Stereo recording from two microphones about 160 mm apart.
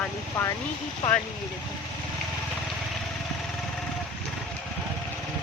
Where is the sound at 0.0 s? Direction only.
15° left (ahead or behind).